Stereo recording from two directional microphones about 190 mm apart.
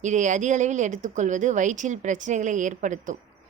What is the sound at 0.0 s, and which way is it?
Speech, 40° right (ahead or behind).